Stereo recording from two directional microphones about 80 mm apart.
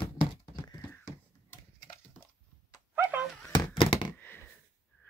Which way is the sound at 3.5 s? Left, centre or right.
Left.